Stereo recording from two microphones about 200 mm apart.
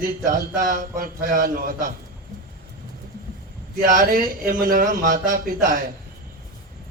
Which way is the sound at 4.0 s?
45° right (ahead or behind).